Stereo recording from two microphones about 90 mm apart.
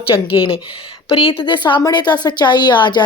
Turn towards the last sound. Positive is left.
turn(degrees=55)  # may be behind; listen again after turning